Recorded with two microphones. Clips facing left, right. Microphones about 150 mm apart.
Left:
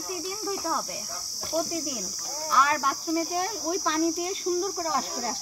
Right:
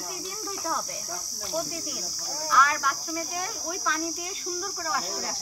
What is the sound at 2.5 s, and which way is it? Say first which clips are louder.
Insect: even; 30° left (ahead or behind).